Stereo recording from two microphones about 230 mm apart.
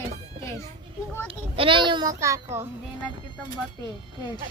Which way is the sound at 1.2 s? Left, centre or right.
Right.